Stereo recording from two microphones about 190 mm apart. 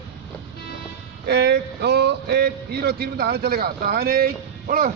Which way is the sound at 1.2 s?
60° right (ahead or behind).